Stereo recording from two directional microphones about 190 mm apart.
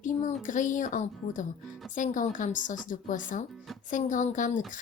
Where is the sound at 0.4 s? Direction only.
40° left (ahead or behind).